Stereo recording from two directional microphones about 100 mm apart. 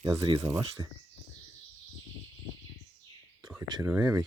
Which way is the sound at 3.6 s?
45° right (ahead or behind).